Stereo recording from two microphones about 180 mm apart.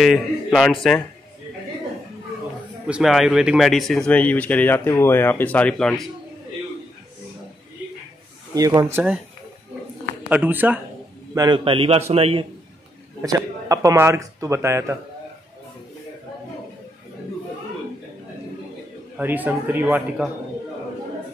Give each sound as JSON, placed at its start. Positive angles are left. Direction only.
{"t": 0.0, "sound": "a man's voice", "side_deg": 0}
{"t": 2.9, "sound": "speech", "side_deg": 0}
{"t": 8.5, "sound": "speech", "side_deg": -20}
{"t": 10.3, "sound": "speech", "side_deg": -10}
{"t": 11.3, "sound": "a man's voice", "side_deg": -25}
{"t": 13.2, "sound": "speech", "side_deg": -20}
{"t": 19.1, "sound": "speech", "side_deg": -10}